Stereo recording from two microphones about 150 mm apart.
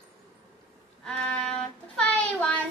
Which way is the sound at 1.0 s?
5° left (ahead or behind).